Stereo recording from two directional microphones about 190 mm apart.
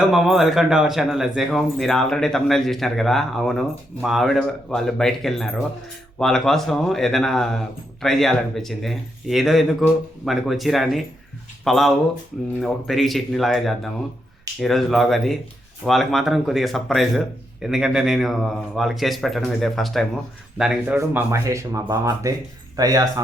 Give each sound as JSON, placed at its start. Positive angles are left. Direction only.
{"t": 0.1, "sound": "speech", "side_deg": 0}